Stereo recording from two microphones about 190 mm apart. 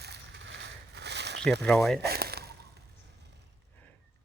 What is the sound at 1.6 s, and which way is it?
Speech, 5° left (ahead or behind).